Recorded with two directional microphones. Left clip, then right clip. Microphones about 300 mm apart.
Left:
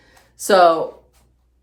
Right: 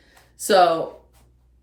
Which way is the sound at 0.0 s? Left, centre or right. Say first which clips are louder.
Left 3 dB; centre.